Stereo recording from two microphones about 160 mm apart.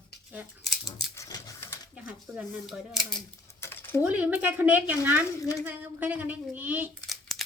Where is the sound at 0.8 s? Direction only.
25° left (ahead or behind).